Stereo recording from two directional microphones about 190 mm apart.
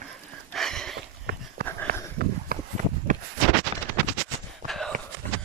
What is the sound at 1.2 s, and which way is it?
Dog, 55° right (ahead or behind).